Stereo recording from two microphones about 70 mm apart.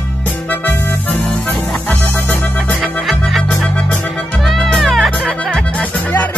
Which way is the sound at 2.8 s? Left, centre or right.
Centre.